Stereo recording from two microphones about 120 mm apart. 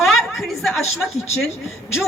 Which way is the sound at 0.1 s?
Centre (ahead or behind).